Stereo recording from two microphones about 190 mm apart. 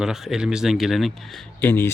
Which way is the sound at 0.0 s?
Centre (ahead or behind).